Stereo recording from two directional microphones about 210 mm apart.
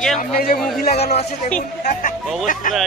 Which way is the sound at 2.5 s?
40° left (ahead or behind).